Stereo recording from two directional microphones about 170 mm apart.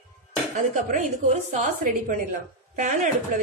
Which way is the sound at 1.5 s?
50° right (ahead or behind).